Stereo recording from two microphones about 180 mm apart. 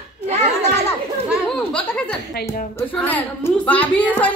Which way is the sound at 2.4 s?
60° left (ahead or behind).